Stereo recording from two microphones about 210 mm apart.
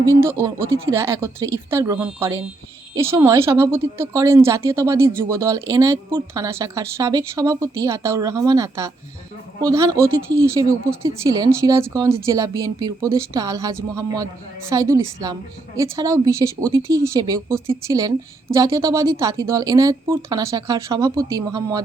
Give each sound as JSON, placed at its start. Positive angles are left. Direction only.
{"t": 0.0, "sound": "a woman's voice", "side_deg": -15}